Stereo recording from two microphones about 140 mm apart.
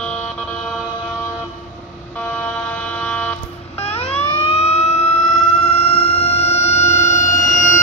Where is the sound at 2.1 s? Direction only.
10° left (ahead or behind).